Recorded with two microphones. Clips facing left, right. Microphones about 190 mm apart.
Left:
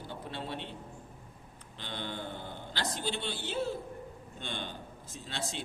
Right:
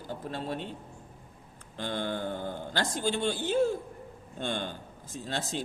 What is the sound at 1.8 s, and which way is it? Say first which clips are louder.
A man's voice: right 7 dB; 45° right (ahead or behind).